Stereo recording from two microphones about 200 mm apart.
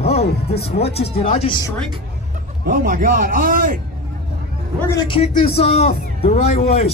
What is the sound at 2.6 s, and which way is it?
A man's voice, 45° right (ahead or behind).